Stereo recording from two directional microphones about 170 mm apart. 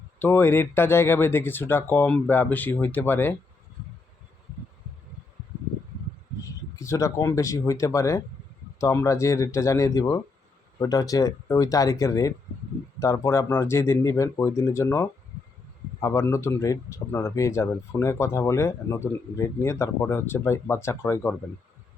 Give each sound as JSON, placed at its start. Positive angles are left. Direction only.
{"t": 0.2, "sound": "speech", "side_deg": 15}
{"t": 6.7, "sound": "speech", "side_deg": 20}